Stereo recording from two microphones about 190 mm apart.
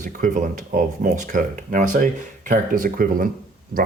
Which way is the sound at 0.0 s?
40° right (ahead or behind).